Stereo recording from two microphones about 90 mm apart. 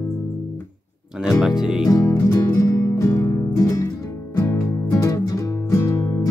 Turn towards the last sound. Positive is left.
turn(degrees=30)  # may be behind; listen again after turning